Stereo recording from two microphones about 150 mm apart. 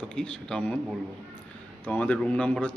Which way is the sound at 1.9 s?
10° left (ahead or behind).